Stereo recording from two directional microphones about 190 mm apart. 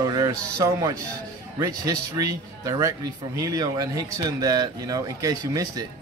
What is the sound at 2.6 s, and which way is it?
A man's voice, 15° right (ahead or behind).